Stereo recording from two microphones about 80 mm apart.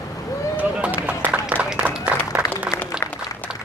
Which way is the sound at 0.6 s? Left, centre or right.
Centre.